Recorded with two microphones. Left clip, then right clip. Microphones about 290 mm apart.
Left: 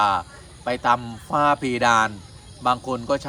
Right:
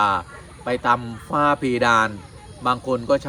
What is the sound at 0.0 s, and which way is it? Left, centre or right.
Speech, centre.